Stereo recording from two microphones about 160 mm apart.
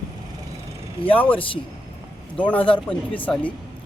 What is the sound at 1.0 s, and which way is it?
Speech, 10° left (ahead or behind).